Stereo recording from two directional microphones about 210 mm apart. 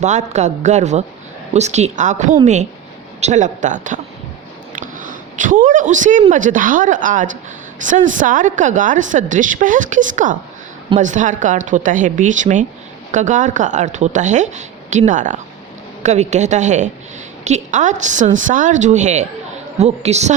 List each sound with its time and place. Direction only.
0.0 s a woman's voice: 35° right (ahead or behind)